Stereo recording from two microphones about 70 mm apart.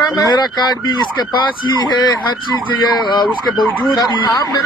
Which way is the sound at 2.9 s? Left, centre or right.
Left.